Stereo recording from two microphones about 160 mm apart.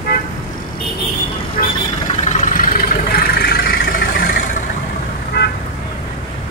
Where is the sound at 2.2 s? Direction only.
55° left (ahead or behind).